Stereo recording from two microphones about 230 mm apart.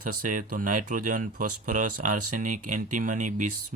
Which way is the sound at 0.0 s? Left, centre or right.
Right.